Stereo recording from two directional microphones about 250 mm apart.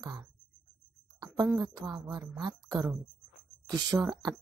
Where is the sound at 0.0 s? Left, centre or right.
Centre.